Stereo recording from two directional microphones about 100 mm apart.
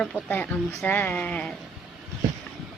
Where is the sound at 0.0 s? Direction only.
15° left (ahead or behind).